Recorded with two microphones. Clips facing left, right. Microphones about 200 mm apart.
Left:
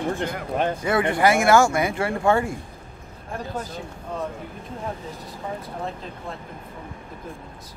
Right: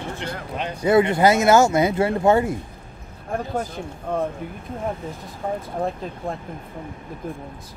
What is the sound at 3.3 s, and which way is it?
Speech, 55° right (ahead or behind).